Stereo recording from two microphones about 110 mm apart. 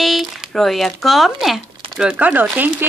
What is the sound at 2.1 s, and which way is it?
Speech, 15° right (ahead or behind).